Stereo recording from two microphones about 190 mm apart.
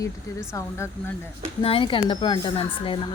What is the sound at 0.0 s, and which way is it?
Speech, 15° left (ahead or behind).